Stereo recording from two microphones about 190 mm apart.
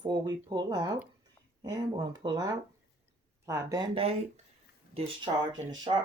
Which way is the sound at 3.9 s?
30° right (ahead or behind).